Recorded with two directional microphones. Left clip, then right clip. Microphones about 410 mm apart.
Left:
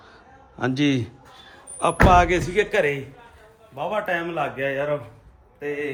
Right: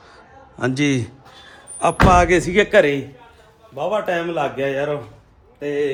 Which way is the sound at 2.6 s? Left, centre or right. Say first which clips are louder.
Right 7 dB; centre.